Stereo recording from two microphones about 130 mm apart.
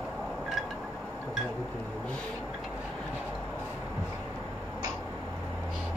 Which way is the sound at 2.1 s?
5° left (ahead or behind).